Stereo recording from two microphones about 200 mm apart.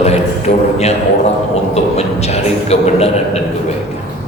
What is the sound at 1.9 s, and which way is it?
A man's voice, 30° left (ahead or behind).